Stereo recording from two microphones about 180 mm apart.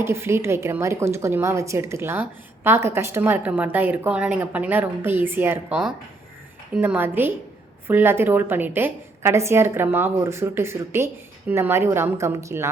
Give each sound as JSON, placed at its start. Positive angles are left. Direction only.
{"t": 0.0, "sound": "a woman's voice", "side_deg": -15}